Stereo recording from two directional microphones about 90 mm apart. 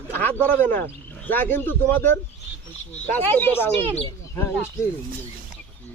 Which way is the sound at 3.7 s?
80° right.